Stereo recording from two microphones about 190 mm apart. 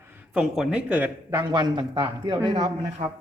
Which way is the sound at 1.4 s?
20° right (ahead or behind).